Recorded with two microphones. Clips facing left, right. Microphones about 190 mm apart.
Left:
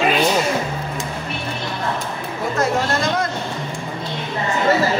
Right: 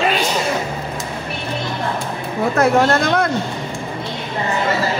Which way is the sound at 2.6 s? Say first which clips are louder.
Right 5 dB; 60° right (ahead or behind).